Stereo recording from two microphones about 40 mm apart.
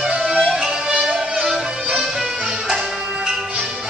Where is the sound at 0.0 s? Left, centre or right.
Centre.